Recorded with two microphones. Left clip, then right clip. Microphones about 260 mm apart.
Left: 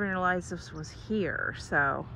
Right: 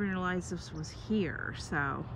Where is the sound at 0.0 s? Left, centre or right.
Centre.